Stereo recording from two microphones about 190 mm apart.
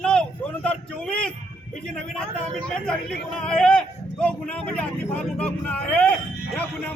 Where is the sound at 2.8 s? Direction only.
5° left (ahead or behind).